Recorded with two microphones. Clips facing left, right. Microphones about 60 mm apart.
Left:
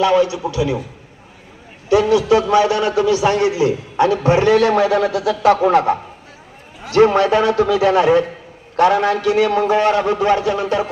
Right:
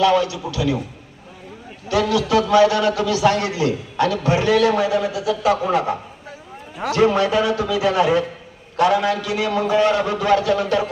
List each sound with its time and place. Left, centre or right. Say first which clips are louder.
0.0 s a man's voice: left 2 dB; left
1.9 s a man's voice: left 5 dB; left
3.9 s a man's voice: left 5 dB; left
4.2 s a man's voice: left 3 dB; left
4.9 s speech: left 4 dB; left
5.5 s a man's voice: left 6 dB; left